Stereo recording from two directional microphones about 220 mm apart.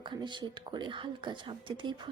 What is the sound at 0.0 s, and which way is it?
A woman's voice, 20° right (ahead or behind).